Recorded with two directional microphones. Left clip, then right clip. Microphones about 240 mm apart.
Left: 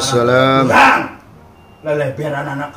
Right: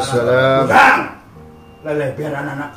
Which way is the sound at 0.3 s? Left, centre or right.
Left.